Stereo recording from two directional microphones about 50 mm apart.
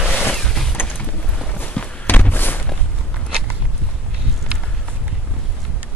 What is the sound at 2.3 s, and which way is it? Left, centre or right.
Walk, left.